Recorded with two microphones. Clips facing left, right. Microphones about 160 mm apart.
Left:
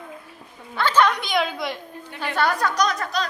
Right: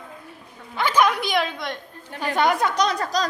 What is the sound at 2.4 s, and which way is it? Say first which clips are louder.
Speech: right 1 dB; 20° right (ahead or behind).